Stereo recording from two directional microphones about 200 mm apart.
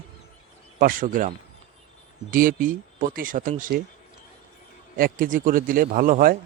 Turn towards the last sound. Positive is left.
turn(degrees=-45)  # may be behind; listen again after turning